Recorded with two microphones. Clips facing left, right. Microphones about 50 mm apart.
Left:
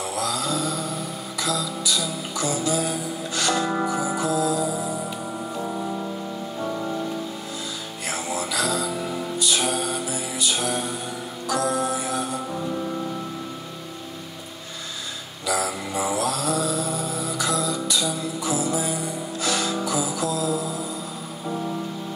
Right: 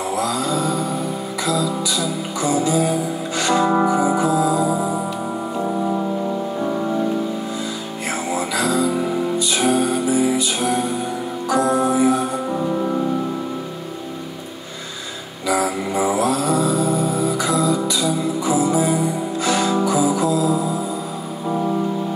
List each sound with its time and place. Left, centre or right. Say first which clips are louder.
0.1 s a sound: right 5 dB; centre
1.4 s music: right 5 dB; centre
8.3 s music: right 5 dB; centre
15.4 s mantra: right 6 dB; right
18.4 s music: right 7 dB; right